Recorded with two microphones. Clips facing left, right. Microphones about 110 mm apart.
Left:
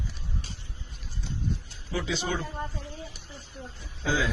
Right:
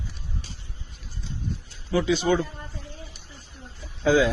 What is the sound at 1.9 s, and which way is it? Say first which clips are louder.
Speech: right 8 dB; 70° right (ahead or behind).